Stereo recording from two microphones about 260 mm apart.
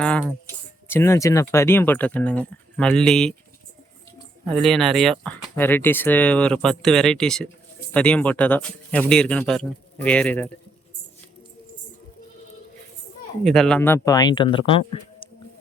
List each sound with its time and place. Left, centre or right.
0.0 s speech: centre
4.6 s speech: centre
13.4 s speech: centre